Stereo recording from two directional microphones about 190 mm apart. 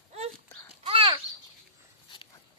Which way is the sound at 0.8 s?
30° right (ahead or behind).